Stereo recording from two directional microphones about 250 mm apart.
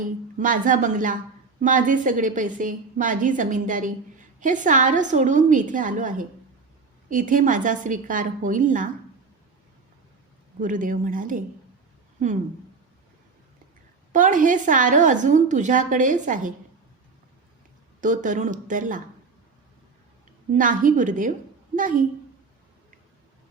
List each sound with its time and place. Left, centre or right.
0.3 s a woman's voice: right
10.6 s a woman's voice: right
14.1 s a woman's voice: right
18.0 s a woman's voice: right
20.5 s a woman's voice: right